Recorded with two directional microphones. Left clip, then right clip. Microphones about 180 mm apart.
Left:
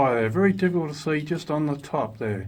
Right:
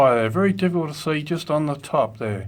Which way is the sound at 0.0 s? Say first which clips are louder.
Right 4 dB; 25° right (ahead or behind).